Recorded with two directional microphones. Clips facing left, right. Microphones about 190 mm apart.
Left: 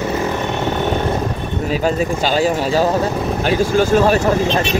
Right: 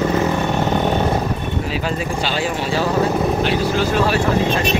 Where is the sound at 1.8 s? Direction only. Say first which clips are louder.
Left 5 dB; 40° left (ahead or behind).